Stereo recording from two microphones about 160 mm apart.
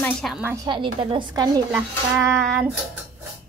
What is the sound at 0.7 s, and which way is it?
Speech, 30° right (ahead or behind).